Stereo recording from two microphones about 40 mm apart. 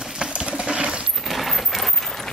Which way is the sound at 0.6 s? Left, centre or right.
Right.